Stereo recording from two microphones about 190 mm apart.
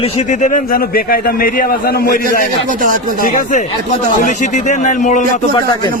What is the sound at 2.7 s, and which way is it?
Speech, 45° right (ahead or behind).